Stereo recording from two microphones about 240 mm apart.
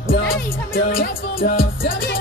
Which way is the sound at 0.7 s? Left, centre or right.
Left.